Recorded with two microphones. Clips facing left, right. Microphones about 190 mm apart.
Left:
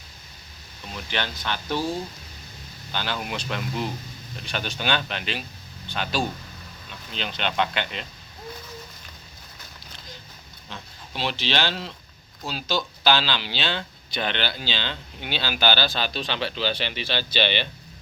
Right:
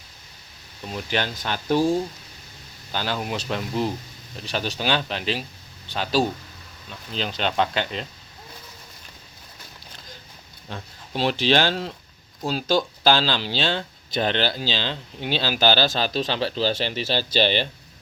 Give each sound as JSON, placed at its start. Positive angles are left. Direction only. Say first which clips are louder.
{"t": 0.9, "sound": "speech", "louder": "right 4 dB", "side_deg": -40}
{"t": 2.9, "sound": "speech", "louder": "right 3 dB", "side_deg": -40}
{"t": 10.7, "sound": "speech", "louder": "right 5 dB", "side_deg": -45}